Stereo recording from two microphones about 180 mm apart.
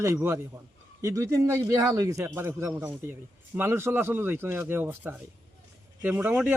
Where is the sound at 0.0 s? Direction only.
15° right (ahead or behind).